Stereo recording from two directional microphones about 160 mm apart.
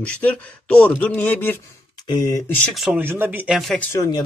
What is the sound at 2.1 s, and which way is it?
Speech, 25° left (ahead or behind).